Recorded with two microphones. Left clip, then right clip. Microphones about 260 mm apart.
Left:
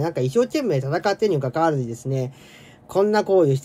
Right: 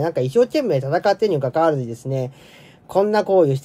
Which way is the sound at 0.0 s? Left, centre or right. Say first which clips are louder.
Right 3 dB; centre.